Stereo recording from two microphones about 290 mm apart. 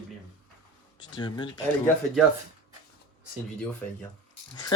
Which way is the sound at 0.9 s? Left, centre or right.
Centre.